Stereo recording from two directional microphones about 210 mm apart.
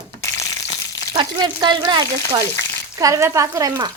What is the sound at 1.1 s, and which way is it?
A woman's voice, 20° right (ahead or behind).